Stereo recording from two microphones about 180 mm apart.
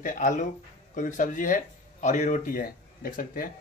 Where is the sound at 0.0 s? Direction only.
45° left (ahead or behind).